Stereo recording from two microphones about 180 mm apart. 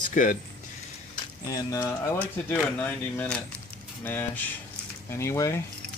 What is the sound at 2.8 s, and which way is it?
Speech, 10° left (ahead or behind).